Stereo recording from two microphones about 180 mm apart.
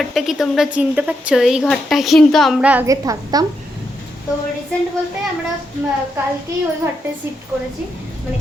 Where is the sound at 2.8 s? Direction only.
20° right (ahead or behind).